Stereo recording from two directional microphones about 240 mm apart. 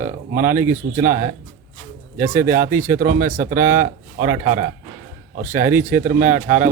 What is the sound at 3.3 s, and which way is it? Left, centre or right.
Speech, right.